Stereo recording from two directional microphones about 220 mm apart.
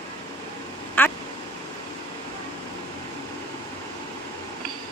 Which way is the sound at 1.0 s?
10° left (ahead or behind).